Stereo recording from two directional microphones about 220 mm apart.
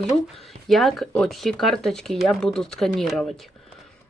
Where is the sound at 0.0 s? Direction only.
Centre (ahead or behind).